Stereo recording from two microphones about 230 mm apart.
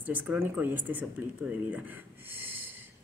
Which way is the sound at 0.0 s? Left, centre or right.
Centre.